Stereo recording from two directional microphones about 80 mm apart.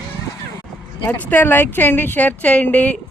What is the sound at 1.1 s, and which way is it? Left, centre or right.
A woman's voice, left.